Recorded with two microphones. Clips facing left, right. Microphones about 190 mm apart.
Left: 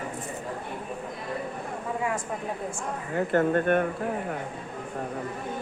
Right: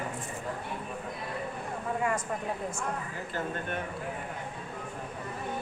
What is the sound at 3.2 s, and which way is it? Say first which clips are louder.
Speech: left 12 dB; 60° left (ahead or behind).